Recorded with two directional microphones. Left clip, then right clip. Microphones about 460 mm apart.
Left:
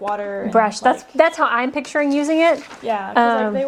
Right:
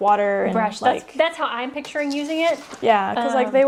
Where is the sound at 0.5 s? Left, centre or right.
Left.